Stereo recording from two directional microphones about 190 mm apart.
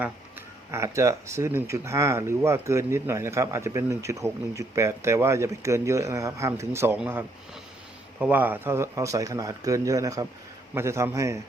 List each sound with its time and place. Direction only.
0.7 s speech: 15° right (ahead or behind)